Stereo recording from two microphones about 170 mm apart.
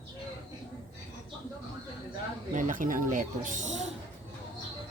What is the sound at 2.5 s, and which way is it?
Speech, 50° right (ahead or behind).